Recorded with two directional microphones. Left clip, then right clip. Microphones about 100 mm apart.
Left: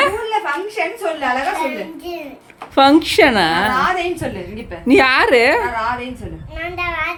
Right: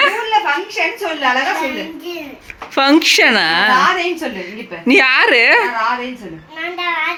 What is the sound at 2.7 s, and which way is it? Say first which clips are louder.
A woman's voice: even; 25° left (ahead or behind).